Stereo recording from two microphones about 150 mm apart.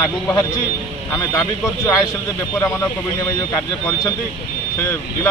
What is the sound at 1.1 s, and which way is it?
Speech, 20° left (ahead or behind).